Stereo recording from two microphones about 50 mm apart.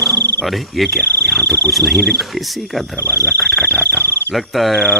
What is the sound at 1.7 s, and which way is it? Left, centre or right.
Cricket, centre.